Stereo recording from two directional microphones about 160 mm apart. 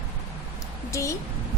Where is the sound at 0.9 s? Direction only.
20° left (ahead or behind).